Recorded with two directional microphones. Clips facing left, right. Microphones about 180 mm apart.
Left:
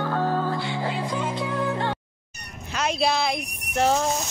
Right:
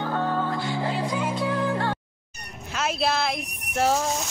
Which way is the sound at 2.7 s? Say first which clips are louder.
Left 2 dB; centre (ahead or behind).